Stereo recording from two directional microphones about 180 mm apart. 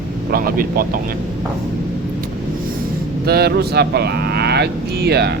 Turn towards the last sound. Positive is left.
turn(degrees=-65)  # may be behind; listen again after turning